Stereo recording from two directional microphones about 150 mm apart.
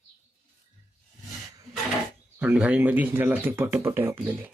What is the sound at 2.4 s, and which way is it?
Speech, 10° right (ahead or behind).